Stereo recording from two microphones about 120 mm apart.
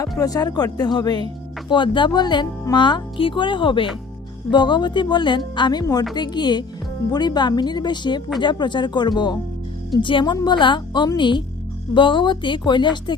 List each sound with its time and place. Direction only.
0.2 s a woman's voice: 30° left (ahead or behind)